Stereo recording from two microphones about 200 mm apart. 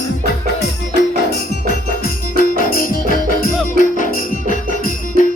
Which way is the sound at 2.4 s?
45° left (ahead or behind).